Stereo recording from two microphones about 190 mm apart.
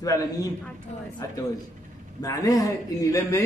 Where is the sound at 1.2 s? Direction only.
15° left (ahead or behind).